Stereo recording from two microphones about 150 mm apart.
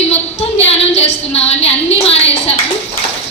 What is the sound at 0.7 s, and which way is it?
A woman's voice, 45° left (ahead or behind).